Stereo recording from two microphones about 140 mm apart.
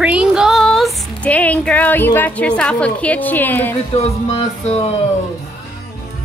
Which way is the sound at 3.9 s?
45° left (ahead or behind).